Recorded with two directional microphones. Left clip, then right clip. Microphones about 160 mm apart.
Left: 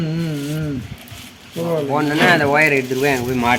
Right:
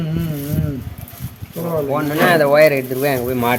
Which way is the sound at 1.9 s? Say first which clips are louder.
Even; 45° right (ahead or behind).